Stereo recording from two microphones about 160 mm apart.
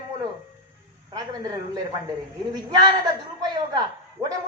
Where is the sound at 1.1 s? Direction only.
25° right (ahead or behind).